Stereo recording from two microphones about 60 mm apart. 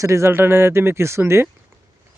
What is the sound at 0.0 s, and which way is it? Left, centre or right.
Speech, right.